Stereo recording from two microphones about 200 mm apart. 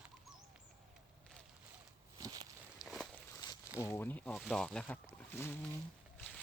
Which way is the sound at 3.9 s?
10° left (ahead or behind).